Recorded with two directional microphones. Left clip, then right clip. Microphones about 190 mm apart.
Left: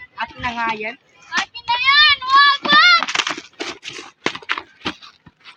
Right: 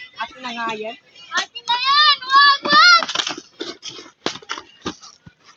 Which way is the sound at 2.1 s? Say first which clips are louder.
Even; 35° left (ahead or behind).